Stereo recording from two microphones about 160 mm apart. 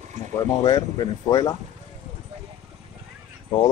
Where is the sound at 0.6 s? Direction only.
25° left (ahead or behind).